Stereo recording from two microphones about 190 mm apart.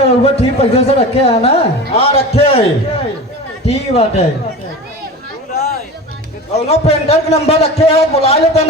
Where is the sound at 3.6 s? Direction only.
30° left (ahead or behind).